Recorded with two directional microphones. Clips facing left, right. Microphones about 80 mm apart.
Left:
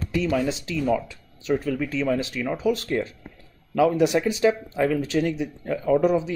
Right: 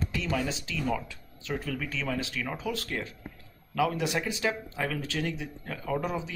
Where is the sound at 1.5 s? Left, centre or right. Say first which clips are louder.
Left 9 dB; centre.